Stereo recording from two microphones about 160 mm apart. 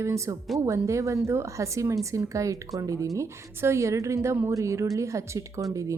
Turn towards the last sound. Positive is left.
turn(degrees=-20)  # may be behind; listen again after turning